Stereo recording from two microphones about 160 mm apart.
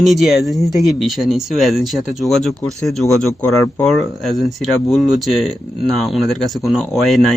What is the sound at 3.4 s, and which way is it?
Speech, 20° left (ahead or behind).